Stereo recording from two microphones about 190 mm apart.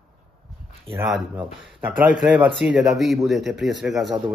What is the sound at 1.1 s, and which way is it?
Speech, 10° right (ahead or behind).